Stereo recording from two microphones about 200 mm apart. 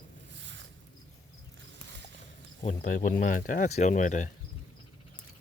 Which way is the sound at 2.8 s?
45° left (ahead or behind).